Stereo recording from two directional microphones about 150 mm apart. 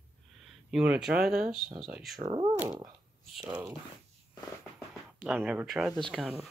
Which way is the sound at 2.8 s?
5° right (ahead or behind).